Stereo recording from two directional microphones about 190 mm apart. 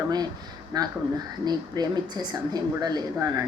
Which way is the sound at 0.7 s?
20° right (ahead or behind).